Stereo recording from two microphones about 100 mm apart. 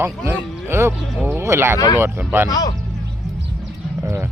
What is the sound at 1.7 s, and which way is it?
Speech, 35° left (ahead or behind).